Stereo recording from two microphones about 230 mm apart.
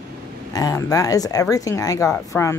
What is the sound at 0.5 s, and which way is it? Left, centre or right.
Speech, centre.